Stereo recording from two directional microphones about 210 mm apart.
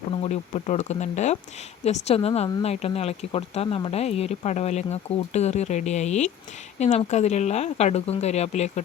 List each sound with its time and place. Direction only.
0.1 s speech: 30° left (ahead or behind)